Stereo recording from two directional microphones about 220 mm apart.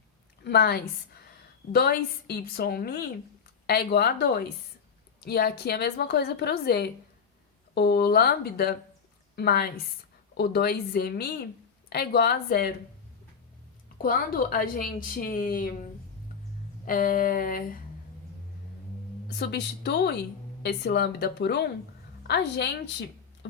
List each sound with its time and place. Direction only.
0.4 s a woman's voice: 45° left (ahead or behind)
14.0 s a woman's voice: 40° left (ahead or behind)
19.4 s a woman's voice: 50° left (ahead or behind)